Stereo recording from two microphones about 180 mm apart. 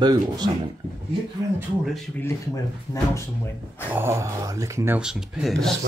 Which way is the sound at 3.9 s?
15° right (ahead or behind).